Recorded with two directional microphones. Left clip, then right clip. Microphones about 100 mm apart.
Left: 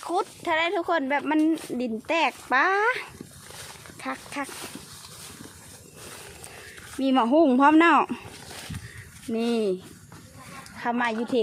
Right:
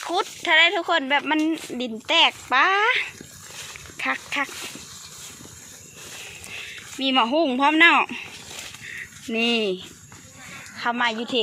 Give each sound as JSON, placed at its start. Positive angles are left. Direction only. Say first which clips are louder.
{"t": 0.1, "sound": "speech", "louder": "right 5 dB", "side_deg": 20}
{"t": 2.0, "sound": "speech", "louder": "right 6 dB", "side_deg": 45}
{"t": 3.9, "sound": "speech", "louder": "right 8 dB", "side_deg": 0}
{"t": 7.0, "sound": "speech", "louder": "even", "side_deg": 60}
{"t": 9.3, "sound": "speech", "louder": "right 3 dB", "side_deg": 15}
{"t": 10.8, "sound": "speech", "louder": "right 3 dB", "side_deg": 45}